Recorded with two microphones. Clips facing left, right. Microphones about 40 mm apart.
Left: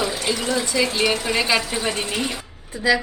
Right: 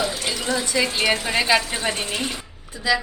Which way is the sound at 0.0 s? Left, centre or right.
Centre.